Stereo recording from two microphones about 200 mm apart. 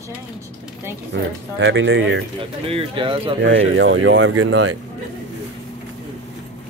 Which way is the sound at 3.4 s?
70° right (ahead or behind).